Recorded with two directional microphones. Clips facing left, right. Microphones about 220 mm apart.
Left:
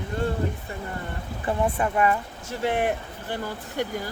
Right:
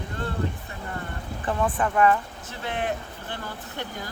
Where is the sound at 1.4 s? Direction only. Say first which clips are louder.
Left 1 dB; 25° left (ahead or behind).